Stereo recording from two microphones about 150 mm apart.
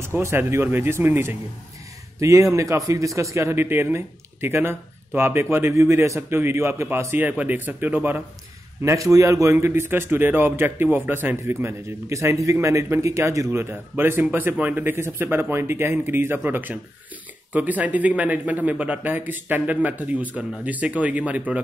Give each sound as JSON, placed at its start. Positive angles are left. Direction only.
{"t": 0.0, "sound": "a man's voice", "side_deg": -15}